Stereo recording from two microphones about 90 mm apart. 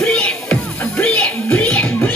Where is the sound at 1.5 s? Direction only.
15° left (ahead or behind).